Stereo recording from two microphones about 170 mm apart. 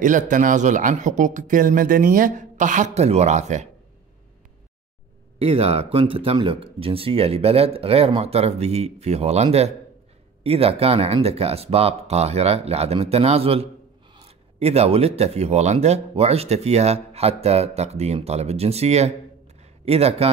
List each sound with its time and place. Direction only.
0.0 s speech: 50° right (ahead or behind)
5.4 s speech: 35° right (ahead or behind)
19.6 s a sound: 35° right (ahead or behind)